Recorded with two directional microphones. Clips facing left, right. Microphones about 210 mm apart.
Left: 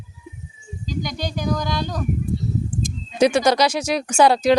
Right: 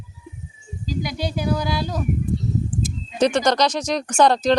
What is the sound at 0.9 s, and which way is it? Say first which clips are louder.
Speech: right 1 dB; 5° right (ahead or behind).